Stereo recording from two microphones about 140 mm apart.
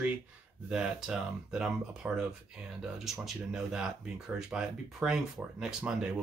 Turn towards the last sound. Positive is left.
turn(degrees=-5)  # may be behind; listen again after turning